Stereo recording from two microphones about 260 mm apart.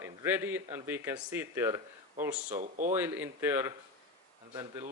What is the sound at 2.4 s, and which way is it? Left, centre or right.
Speech, right.